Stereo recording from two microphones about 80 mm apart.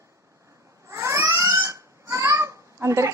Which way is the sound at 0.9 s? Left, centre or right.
Right.